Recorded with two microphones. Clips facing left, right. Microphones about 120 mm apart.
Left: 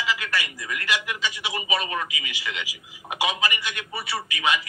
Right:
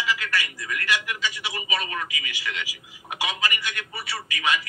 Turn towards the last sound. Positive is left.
turn(degrees=20)  # may be behind; listen again after turning